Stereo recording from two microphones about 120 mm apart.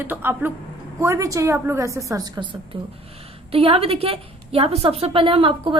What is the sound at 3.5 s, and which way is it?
A woman's voice, 55° right (ahead or behind).